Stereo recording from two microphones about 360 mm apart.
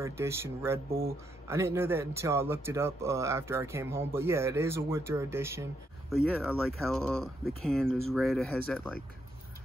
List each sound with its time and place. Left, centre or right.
0.0 s speech: centre